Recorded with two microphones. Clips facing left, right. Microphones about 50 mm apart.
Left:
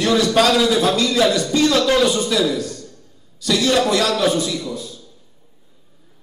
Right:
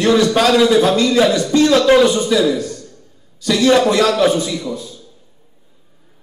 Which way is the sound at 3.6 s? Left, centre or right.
Centre.